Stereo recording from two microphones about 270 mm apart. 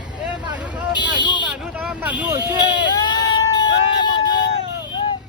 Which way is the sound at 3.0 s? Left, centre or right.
Centre.